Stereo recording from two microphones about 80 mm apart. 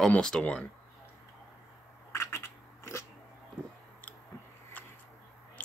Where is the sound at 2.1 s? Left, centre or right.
Left.